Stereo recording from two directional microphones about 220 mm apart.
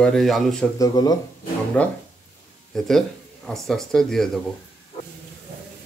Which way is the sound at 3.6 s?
Centre (ahead or behind).